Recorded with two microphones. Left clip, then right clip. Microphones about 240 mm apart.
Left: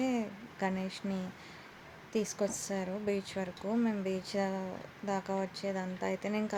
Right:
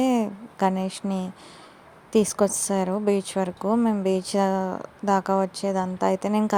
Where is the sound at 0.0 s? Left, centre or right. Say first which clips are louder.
Right 11 dB; right.